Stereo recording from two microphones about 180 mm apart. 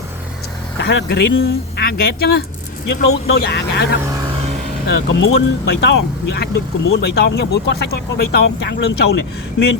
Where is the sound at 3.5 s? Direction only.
70° left (ahead or behind).